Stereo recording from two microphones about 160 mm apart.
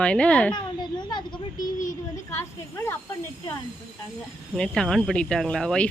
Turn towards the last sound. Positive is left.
turn(degrees=5)  # may be behind; listen again after turning